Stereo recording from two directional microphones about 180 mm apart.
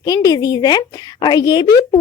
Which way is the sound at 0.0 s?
20° left (ahead or behind).